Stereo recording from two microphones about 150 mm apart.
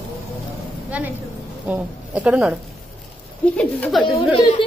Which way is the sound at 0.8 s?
10° right (ahead or behind).